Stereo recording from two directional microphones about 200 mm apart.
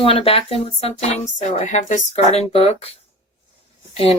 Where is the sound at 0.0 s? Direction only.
30° left (ahead or behind).